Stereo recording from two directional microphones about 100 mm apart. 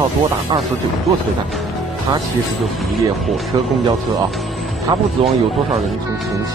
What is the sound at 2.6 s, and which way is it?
Speech, centre (ahead or behind).